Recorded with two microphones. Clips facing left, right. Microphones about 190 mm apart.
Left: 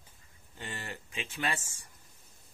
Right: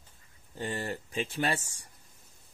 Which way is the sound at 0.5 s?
35° right (ahead or behind).